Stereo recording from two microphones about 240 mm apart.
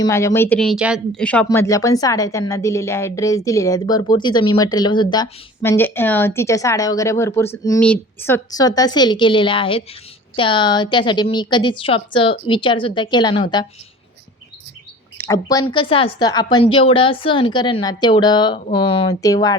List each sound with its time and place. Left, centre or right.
0.0 s a woman's voice: centre
15.2 s a woman's voice: centre